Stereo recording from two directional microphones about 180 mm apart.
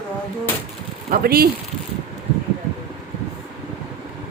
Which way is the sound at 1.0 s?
55° right (ahead or behind).